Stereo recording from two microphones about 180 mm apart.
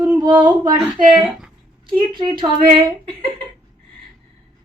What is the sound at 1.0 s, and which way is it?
A woman's voice, 25° right (ahead or behind).